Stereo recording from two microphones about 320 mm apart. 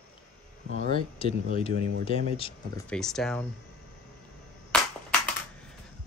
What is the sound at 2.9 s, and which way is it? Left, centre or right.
Speech, centre.